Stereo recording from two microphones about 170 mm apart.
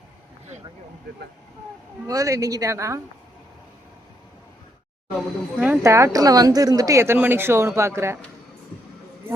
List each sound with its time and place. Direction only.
2.0 s speech: 20° right (ahead or behind)
5.5 s speech: 5° right (ahead or behind)
5.8 s speech: 15° right (ahead or behind)